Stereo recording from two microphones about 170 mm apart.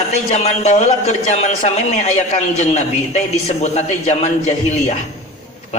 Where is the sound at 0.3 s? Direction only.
40° left (ahead or behind).